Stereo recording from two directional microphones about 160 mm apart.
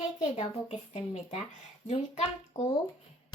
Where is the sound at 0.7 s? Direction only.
45° left (ahead or behind).